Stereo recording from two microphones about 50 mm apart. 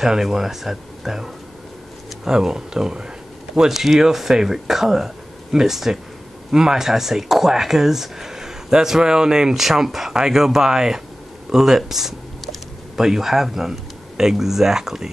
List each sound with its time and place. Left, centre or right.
0.0 s speech: centre